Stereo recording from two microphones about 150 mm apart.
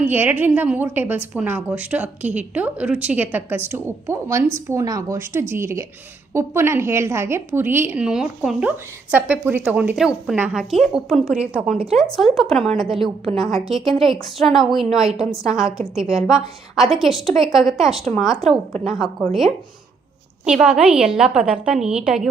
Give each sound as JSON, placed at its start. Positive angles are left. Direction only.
{"t": 0.0, "sound": "a woman's voice", "side_deg": -15}